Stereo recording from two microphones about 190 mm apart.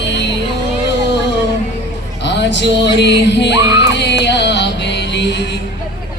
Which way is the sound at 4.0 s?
65° left (ahead or behind).